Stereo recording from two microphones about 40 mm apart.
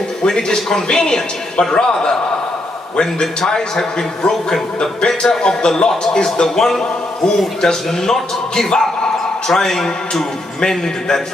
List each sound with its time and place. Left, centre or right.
0.2 s a man's voice: centre